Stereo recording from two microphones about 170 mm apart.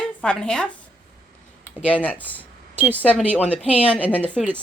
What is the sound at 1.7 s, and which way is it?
A woman's voice, 10° left (ahead or behind).